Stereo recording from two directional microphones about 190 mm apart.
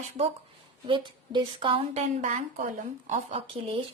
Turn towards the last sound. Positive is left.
turn(degrees=-30)  # may be behind; listen again after turning